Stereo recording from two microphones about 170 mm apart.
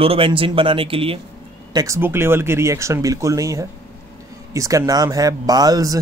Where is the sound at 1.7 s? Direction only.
20° right (ahead or behind).